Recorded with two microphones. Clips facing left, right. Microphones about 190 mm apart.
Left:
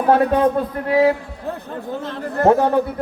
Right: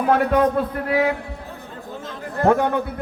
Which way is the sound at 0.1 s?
30° left (ahead or behind).